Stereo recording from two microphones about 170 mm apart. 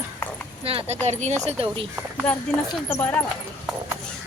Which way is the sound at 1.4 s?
30° right (ahead or behind).